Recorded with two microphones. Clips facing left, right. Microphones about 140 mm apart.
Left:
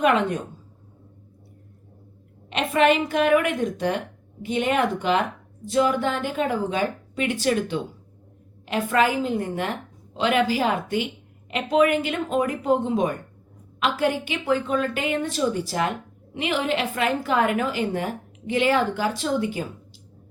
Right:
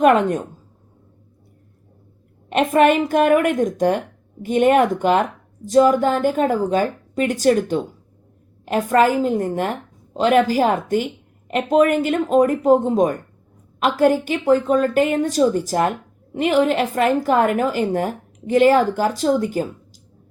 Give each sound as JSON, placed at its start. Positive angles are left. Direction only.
{"t": 0.0, "sound": "a woman's voice", "side_deg": -45}
{"t": 2.5, "sound": "a woman's voice", "side_deg": -50}